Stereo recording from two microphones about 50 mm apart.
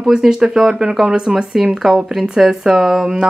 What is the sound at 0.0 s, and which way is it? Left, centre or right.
Speech, centre.